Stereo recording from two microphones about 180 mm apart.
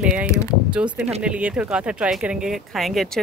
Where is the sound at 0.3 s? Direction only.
15° left (ahead or behind).